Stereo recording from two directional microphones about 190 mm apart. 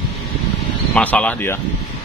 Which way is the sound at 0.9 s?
5° left (ahead or behind).